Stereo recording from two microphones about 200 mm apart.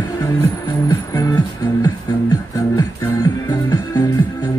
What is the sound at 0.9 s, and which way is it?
Music, 20° left (ahead or behind).